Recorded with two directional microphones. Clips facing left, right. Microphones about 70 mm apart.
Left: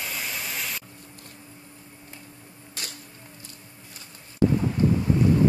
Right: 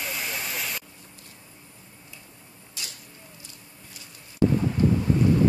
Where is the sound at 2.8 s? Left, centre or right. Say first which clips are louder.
Left 2 dB; left.